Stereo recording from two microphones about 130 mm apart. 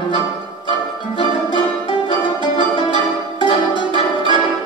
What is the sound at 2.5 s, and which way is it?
Music, 40° left (ahead or behind).